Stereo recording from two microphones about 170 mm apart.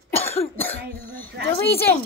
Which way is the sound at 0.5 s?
10° left (ahead or behind).